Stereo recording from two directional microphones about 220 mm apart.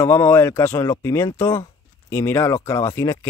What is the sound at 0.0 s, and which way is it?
A man's voice, 10° left (ahead or behind).